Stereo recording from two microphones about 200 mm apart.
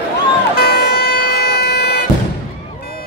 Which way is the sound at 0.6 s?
50° left (ahead or behind).